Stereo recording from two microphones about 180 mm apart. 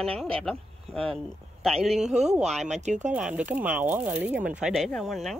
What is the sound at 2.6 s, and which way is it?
Speech, 40° right (ahead or behind).